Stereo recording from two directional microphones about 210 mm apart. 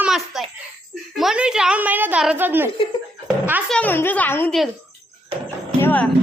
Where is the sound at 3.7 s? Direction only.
5° left (ahead or behind).